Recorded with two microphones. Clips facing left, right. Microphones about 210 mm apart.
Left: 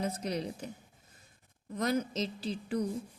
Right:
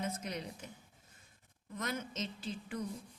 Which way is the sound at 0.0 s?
35° left (ahead or behind).